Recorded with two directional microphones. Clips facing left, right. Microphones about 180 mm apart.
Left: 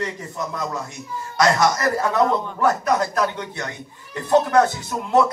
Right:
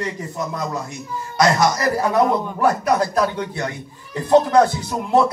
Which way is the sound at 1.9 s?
15° right (ahead or behind).